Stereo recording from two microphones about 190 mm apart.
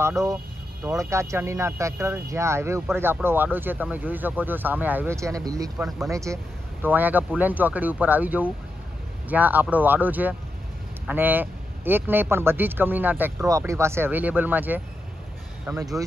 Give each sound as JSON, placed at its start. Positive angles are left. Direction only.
{"t": 0.8, "sound": "speech", "side_deg": -15}
{"t": 5.8, "sound": "speech", "side_deg": 0}
{"t": 6.0, "sound": "speech", "side_deg": -15}